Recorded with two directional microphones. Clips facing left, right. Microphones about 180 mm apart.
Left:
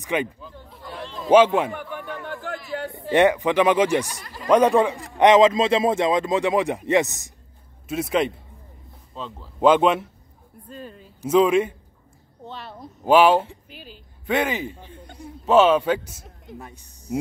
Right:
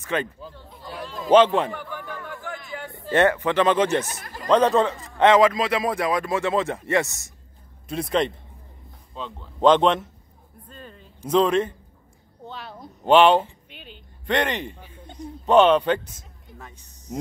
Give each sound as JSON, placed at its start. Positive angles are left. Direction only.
{"t": 0.0, "sound": "speech", "side_deg": 15}
{"t": 0.7, "sound": "chatter", "side_deg": 0}
{"t": 1.1, "sound": "a sound", "side_deg": 5}
{"t": 3.1, "sound": "a man's voice", "side_deg": 15}
{"t": 4.2, "sound": "a sound", "side_deg": -45}
{"t": 4.5, "sound": "a man's voice", "side_deg": 10}
{"t": 7.9, "sound": "a man's voice", "side_deg": 5}